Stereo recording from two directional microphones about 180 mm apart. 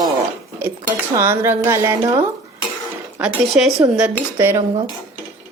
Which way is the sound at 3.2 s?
5° right (ahead or behind).